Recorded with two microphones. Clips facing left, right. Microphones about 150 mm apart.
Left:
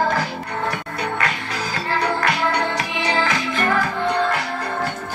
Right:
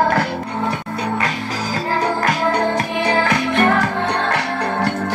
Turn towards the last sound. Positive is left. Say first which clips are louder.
# right 1 dB
turn(degrees=-75)  # may be behind; listen again after turning